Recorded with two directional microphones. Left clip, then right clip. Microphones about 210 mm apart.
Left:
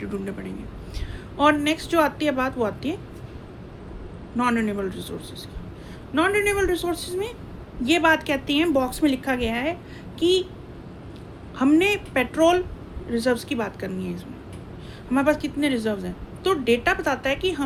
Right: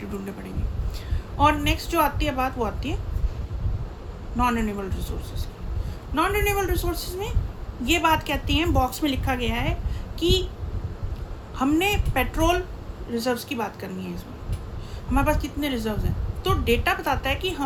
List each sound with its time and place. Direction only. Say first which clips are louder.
1.4 s a woman's voice: left 1 dB; 15° right (ahead or behind)
4.4 s a woman's voice: left 1 dB; 20° right (ahead or behind)
6.1 s a woman's voice: left 2 dB; 15° right (ahead or behind)
11.5 s a woman's voice: left 3 dB; 20° right (ahead or behind)